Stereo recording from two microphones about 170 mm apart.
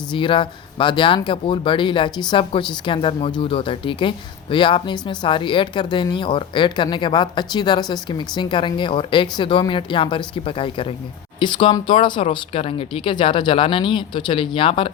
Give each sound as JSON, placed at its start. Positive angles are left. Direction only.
{"t": 0.1, "sound": "speech", "side_deg": 30}